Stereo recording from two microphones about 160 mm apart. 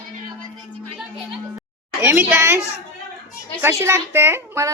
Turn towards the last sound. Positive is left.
turn(degrees=-15)  # may be behind; listen again after turning